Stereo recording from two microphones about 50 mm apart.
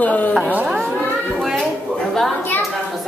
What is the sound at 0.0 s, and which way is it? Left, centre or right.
Speech, left.